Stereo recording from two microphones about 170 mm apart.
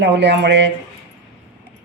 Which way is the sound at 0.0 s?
90° right.